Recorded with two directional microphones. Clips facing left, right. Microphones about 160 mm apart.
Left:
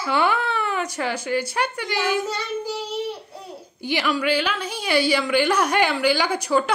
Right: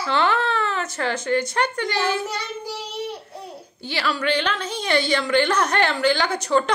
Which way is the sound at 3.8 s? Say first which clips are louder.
Left 3 dB; 15° left (ahead or behind).